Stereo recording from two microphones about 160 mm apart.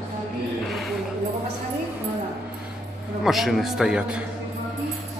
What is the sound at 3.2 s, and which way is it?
A man's voice, centre (ahead or behind).